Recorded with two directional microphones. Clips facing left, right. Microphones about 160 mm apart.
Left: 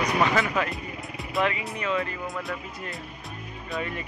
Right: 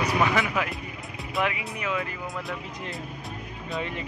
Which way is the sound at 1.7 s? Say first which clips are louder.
Left 2 dB; 10° right (ahead or behind).